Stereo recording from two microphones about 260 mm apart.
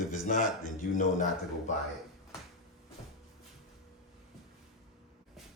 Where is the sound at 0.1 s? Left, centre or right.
Left.